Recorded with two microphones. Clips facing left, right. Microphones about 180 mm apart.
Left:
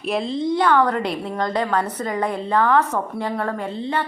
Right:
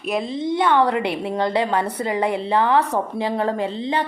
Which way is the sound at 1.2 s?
15° right (ahead or behind).